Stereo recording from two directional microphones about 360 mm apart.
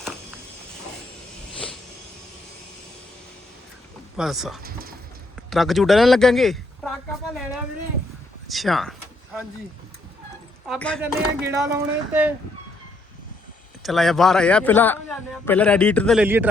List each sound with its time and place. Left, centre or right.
4.2 s a man's voice: centre
4.6 s clip-clop: right
5.5 s speech: centre
8.4 s a sound: centre
10.7 s a man's voice: centre
13.8 s a man's voice: centre